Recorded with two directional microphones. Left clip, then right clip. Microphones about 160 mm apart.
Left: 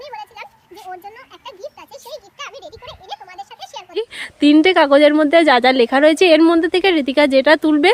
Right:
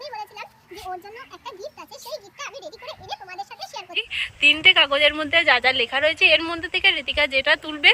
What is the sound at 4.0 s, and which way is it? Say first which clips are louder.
Speech: left 2 dB; 50° left (ahead or behind).